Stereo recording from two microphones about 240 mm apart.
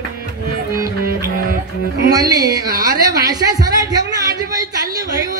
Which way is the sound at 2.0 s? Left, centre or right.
Centre.